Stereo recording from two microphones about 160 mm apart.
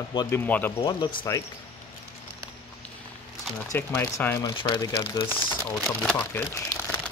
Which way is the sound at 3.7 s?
15° left (ahead or behind).